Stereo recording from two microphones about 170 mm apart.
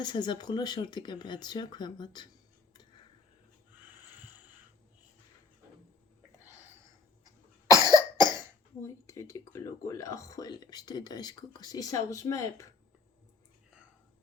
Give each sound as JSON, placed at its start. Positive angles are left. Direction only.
{"t": 0.0, "sound": "speech", "side_deg": 25}
{"t": 6.4, "sound": "a sound", "side_deg": -10}
{"t": 7.9, "sound": "speech", "side_deg": 25}